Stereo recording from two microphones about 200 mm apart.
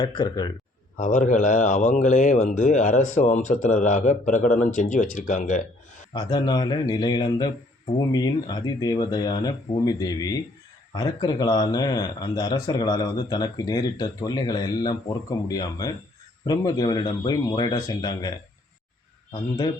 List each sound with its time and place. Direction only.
0.0 s speech: 20° left (ahead or behind)
0.9 s speech: 40° left (ahead or behind)
6.1 s speech: 20° left (ahead or behind)